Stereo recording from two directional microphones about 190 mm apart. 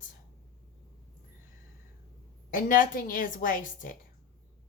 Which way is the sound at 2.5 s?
45° left (ahead or behind).